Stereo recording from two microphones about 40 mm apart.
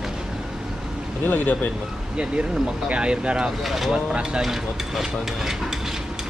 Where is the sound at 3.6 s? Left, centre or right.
Centre.